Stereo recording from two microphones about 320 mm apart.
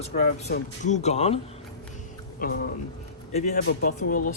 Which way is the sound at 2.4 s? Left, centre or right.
Left.